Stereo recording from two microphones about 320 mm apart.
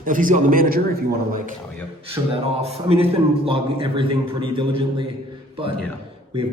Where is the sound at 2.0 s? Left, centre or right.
Centre.